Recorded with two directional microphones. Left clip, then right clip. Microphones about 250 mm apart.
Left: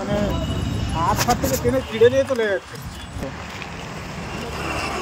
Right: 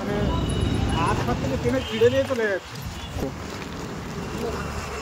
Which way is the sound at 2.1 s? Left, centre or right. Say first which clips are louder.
Left 3 dB; left.